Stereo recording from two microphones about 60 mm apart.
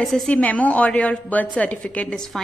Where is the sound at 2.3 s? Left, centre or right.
Centre.